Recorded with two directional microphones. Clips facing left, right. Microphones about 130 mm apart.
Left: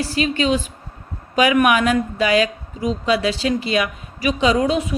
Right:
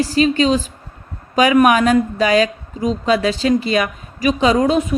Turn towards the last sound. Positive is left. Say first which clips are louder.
# right 3 dB
turn(degrees=-45)  # may be behind; listen again after turning